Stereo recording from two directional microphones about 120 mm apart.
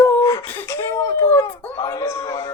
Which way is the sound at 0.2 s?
25° left (ahead or behind).